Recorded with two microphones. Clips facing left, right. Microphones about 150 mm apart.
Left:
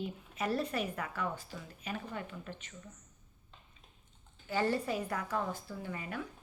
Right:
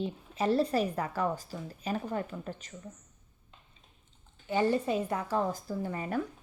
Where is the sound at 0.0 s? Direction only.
30° right (ahead or behind).